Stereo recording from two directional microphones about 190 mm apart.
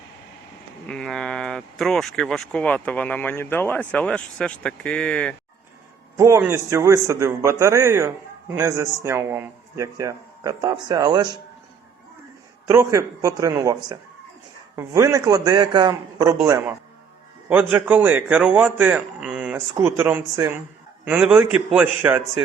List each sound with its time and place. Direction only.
0.9 s speech: 5° left (ahead or behind)
6.1 s a man's voice: 15° right (ahead or behind)
12.6 s a man's voice: 15° right (ahead or behind)
17.5 s a man's voice: 10° right (ahead or behind)